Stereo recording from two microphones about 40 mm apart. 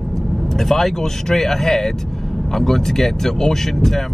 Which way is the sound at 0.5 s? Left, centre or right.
Centre.